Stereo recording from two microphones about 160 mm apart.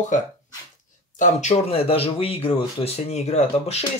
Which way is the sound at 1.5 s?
35° left (ahead or behind).